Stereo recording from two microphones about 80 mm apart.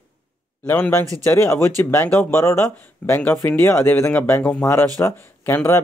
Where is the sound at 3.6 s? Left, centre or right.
Left.